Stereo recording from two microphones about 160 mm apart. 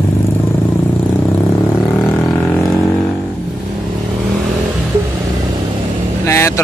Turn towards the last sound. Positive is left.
turn(degrees=15)  # may be behind; listen again after turning